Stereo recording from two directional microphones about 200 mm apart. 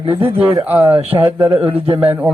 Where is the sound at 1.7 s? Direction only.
25° right (ahead or behind).